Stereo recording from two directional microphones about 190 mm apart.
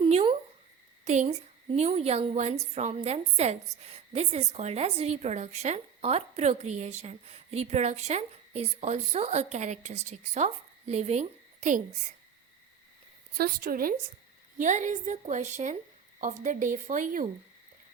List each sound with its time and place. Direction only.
0.0 s a sound: 30° right (ahead or behind)
1.0 s a woman's voice: 35° right (ahead or behind)
13.3 s a woman's voice: 55° right (ahead or behind)